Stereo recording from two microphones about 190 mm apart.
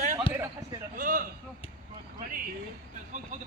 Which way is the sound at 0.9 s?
45° right (ahead or behind).